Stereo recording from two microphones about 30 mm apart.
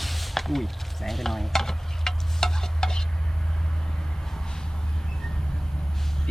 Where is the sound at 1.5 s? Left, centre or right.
Centre.